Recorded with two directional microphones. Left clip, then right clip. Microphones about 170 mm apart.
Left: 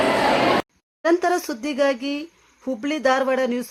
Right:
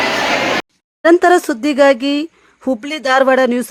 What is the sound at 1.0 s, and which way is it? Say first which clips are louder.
Speech: right 10 dB; 40° right (ahead or behind).